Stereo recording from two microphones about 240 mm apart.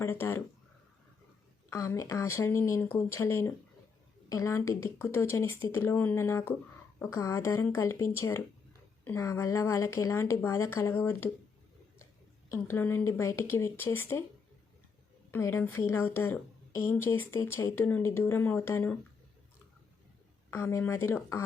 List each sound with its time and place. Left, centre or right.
0.0 s a woman's voice: centre
1.7 s a woman's voice: centre
12.7 s a woman's voice: centre
15.3 s a woman's voice: centre
20.5 s a woman's voice: centre